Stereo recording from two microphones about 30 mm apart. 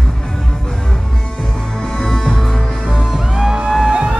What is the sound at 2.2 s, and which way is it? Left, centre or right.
Music, centre.